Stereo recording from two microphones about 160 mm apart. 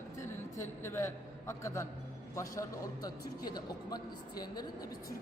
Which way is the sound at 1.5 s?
20° left (ahead or behind).